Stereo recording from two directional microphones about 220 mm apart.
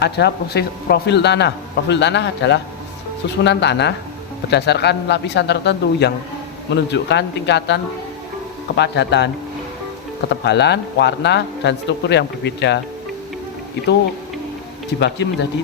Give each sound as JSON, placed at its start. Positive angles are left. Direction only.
{"t": 0.0, "sound": "a man's voice", "side_deg": 50}
{"t": 10.4, "sound": "a man's voice", "side_deg": 50}
{"t": 14.9, "sound": "a man's voice", "side_deg": 50}